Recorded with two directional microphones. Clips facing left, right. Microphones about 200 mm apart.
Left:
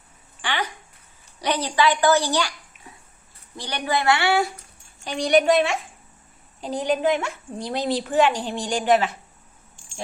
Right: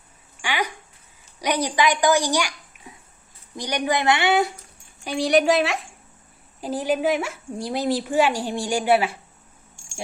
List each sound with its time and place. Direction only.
0.4 s a sound: 10° right (ahead or behind)
1.4 s a child's voice: 10° right (ahead or behind)
5.0 s a woman's voice: 5° right (ahead or behind)